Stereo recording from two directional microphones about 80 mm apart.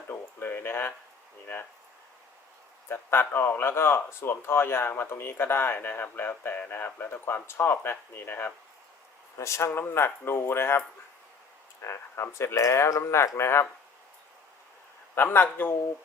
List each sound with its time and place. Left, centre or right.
0.1 s a sound: left
2.9 s speech: left
9.4 s speech: left
15.1 s speech: left